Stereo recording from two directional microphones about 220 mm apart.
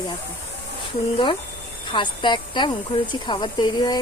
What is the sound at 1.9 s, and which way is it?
Speech, 20° left (ahead or behind).